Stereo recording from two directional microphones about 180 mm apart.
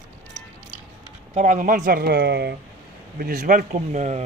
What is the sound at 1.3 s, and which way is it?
Speech, 45° right (ahead or behind).